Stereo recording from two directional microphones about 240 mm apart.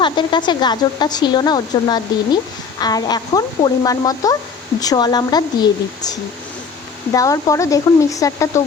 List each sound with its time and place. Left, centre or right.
0.0 s speech: centre
7.1 s speech: centre